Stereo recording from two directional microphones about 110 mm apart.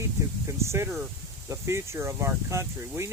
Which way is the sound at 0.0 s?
25° right (ahead or behind).